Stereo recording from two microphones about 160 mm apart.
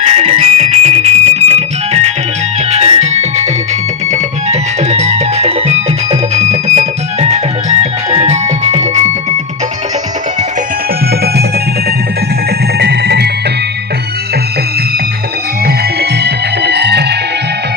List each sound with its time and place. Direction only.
0.0 s music: 40° right (ahead or behind)
12.8 s music: 90° right
15.6 s music: 85° right